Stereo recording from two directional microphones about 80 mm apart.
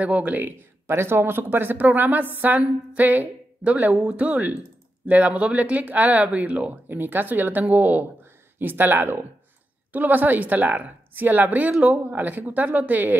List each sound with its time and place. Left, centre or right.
0.0 s speech: centre